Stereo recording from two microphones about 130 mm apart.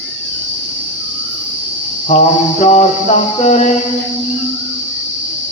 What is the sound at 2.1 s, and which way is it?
Speech, 55° left (ahead or behind).